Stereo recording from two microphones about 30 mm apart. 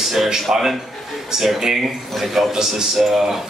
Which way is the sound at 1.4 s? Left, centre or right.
Centre.